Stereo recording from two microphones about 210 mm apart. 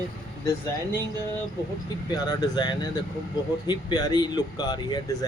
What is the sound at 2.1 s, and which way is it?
Speech, 20° left (ahead or behind).